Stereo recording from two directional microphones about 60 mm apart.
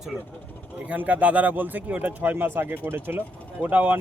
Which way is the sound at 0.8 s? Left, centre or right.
Right.